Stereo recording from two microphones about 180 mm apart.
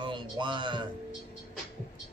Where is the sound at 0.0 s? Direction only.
25° right (ahead or behind).